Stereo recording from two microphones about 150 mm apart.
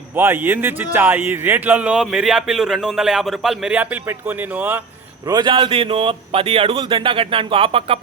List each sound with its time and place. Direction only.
0.2 s a man's voice: 15° right (ahead or behind)
5.2 s speech: 30° right (ahead or behind)